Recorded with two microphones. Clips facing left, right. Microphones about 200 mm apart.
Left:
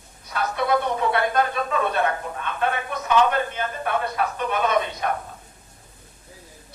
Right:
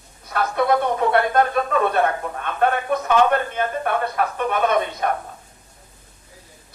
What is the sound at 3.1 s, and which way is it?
A man's voice, 50° right (ahead or behind).